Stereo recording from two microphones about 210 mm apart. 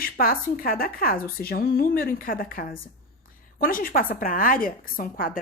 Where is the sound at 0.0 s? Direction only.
45° left (ahead or behind).